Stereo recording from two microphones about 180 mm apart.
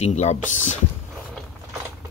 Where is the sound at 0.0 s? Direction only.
40° left (ahead or behind).